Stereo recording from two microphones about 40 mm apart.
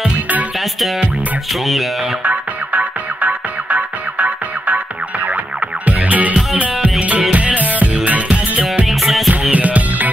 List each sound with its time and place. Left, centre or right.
1.5 s speech: centre
2.2 s music: right
8.8 s music: centre
9.3 s music: right